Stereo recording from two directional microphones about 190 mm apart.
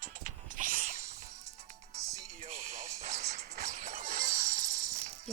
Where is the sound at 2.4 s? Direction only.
35° right (ahead or behind).